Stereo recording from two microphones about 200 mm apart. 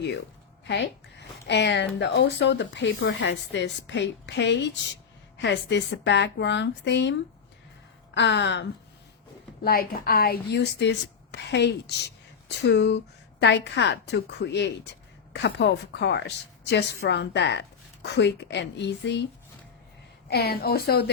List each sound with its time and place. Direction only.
0.6 s a woman's voice: 60° left (ahead or behind)
9.6 s a woman's voice: 50° left (ahead or behind)
20.3 s a woman's voice: 50° left (ahead or behind)